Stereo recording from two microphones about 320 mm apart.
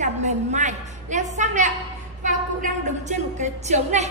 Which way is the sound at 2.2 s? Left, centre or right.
Right.